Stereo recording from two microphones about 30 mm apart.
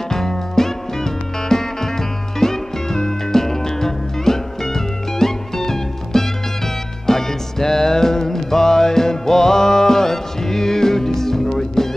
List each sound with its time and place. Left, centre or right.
0.1 s music: centre